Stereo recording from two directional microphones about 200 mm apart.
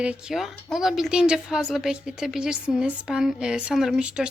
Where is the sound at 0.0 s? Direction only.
5° right (ahead or behind).